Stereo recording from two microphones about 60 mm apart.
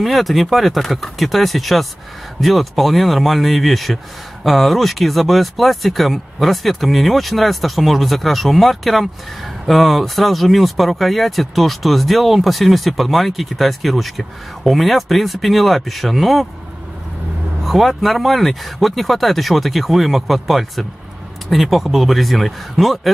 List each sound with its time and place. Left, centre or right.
0.0 s speech: centre
17.6 s speech: centre